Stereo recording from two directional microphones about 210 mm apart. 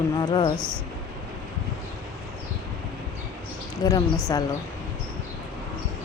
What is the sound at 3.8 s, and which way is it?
Speech, 20° left (ahead or behind).